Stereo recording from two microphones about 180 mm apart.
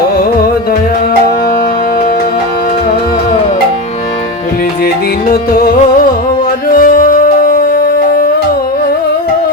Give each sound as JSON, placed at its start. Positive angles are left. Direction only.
{"t": 5.3, "sound": "music", "side_deg": 55}